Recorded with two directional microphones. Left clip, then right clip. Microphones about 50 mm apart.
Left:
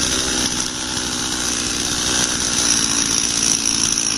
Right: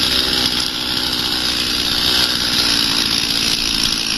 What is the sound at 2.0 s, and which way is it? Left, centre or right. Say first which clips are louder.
Chainsaw: right 4 dB; centre.